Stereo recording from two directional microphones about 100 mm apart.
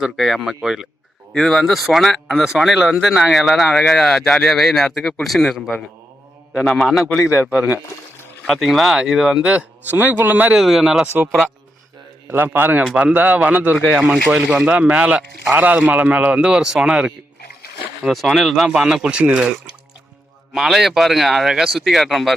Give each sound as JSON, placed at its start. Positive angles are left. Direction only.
{"t": 0.0, "sound": "a man's voice", "side_deg": 0}
{"t": 7.0, "sound": "a man's voice", "side_deg": 30}
{"t": 8.4, "sound": "speech", "side_deg": 0}
{"t": 10.6, "sound": "speech", "side_deg": -5}
{"t": 12.3, "sound": "a man's voice", "side_deg": -20}
{"t": 12.8, "sound": "speech", "side_deg": -10}
{"t": 13.9, "sound": "speech", "side_deg": 0}
{"t": 18.1, "sound": "speech", "side_deg": 0}